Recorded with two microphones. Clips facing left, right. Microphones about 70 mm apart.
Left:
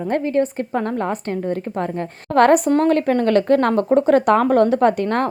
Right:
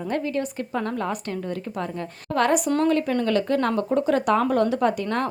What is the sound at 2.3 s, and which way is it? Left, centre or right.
Speech, left.